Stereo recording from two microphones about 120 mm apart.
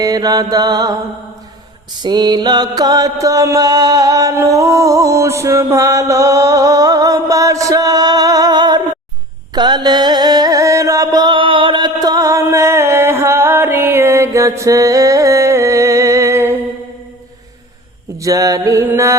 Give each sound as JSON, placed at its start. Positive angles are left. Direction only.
{"t": 0.0, "sound": "mantra", "side_deg": -30}
{"t": 2.0, "sound": "mantra", "side_deg": -35}
{"t": 9.6, "sound": "music", "side_deg": -35}
{"t": 11.9, "sound": "music", "side_deg": -30}
{"t": 18.2, "sound": "mantra", "side_deg": -30}